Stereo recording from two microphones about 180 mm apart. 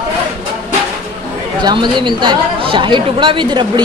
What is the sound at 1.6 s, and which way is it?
Speech, 25° right (ahead or behind).